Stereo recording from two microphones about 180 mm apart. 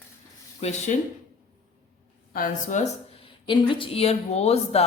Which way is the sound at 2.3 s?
45° left (ahead or behind).